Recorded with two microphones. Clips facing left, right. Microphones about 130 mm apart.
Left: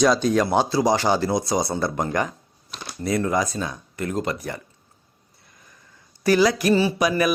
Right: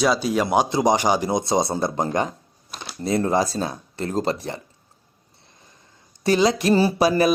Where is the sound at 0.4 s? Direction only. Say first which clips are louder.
Right 1 dB; 15° right (ahead or behind).